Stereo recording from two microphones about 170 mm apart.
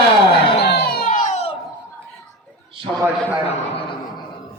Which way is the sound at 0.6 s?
70° left (ahead or behind).